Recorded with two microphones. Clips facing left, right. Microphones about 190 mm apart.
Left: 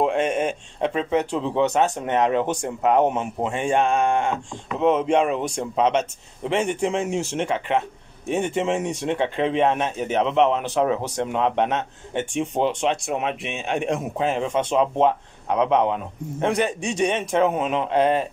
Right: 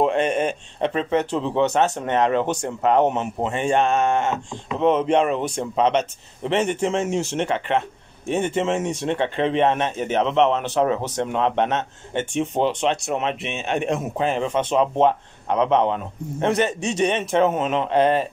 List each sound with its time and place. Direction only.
0.0 s speech: 5° left (ahead or behind)
8.6 s speech: 15° left (ahead or behind)
13.7 s speech: centre (ahead or behind)
16.8 s speech: 15° left (ahead or behind)